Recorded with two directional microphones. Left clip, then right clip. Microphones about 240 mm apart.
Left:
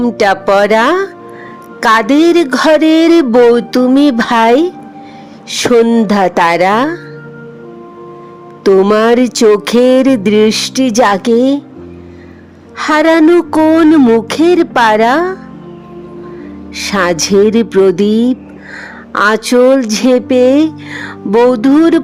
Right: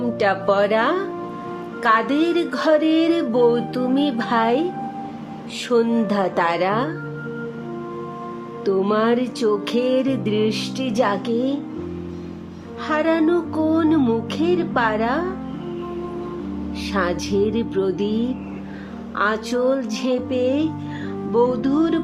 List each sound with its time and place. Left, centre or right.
0.0 s music: left
8.6 s music: left
12.8 s music: left
16.7 s music: left